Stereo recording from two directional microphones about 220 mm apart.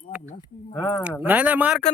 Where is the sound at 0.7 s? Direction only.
15° left (ahead or behind).